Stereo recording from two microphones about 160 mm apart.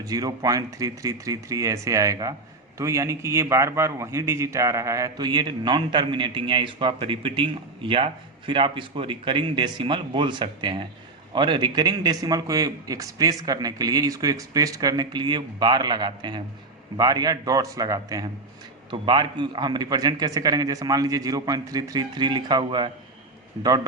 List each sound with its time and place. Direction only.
0.0 s a man's voice: 20° right (ahead or behind)